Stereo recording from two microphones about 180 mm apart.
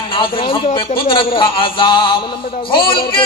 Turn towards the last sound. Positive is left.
turn(degrees=30)  # may be behind; listen again after turning